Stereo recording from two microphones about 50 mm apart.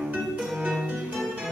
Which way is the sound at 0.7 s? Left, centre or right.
Centre.